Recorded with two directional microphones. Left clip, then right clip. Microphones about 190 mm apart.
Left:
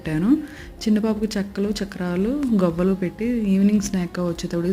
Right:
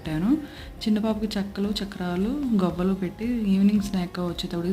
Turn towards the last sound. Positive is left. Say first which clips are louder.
# left 5 dB
turn(degrees=20)  # may be behind; listen again after turning